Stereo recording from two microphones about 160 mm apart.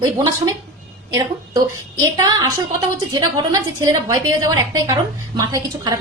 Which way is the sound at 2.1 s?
25° right (ahead or behind).